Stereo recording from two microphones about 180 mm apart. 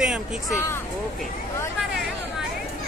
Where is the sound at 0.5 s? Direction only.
15° left (ahead or behind).